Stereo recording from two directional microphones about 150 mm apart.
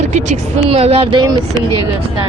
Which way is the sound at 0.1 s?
50° right (ahead or behind).